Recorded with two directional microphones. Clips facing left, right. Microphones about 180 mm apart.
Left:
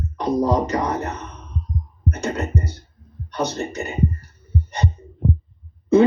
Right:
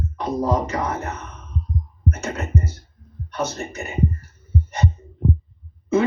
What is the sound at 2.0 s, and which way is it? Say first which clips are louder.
Music: left 3 dB; 35° left (ahead or behind).